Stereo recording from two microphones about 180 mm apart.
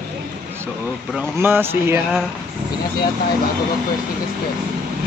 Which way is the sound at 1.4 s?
10° right (ahead or behind).